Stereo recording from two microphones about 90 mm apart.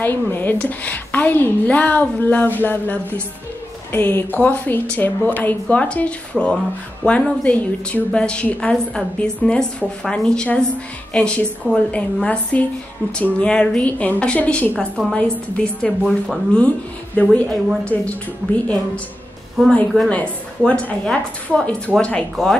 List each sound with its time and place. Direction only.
0.0 s a woman's voice: 25° left (ahead or behind)
19.6 s a woman's voice: 5° left (ahead or behind)